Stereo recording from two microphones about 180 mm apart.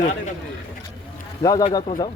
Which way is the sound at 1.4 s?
20° left (ahead or behind).